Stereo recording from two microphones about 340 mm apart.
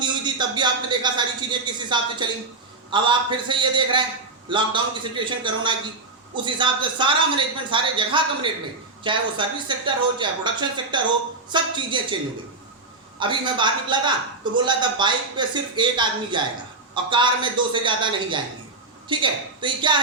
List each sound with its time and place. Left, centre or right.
0.0 s a man's voice: centre
13.1 s a man's voice: centre